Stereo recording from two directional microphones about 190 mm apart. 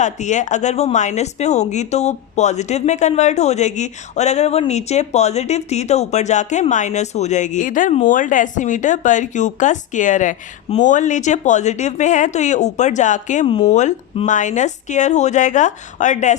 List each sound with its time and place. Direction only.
0.0 s speech: 40° left (ahead or behind)